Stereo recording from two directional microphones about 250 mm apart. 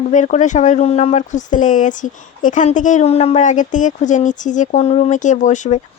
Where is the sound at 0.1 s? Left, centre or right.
Left.